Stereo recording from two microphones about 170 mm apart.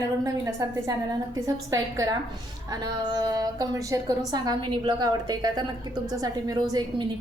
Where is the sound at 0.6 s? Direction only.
20° right (ahead or behind).